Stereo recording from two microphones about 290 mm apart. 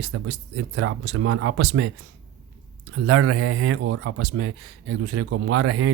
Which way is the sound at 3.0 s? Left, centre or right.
Right.